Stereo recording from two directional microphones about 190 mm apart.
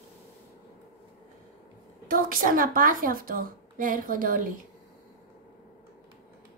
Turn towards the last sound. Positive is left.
turn(degrees=-45)  # may be behind; listen again after turning